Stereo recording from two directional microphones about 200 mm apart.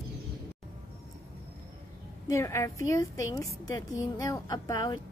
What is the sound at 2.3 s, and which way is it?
A woman's voice, 15° left (ahead or behind).